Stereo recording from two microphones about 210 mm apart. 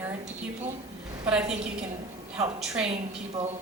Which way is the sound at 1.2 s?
5° right (ahead or behind).